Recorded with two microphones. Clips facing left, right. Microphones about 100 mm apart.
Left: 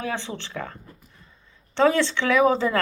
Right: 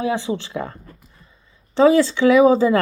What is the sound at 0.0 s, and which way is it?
Speech, 10° right (ahead or behind).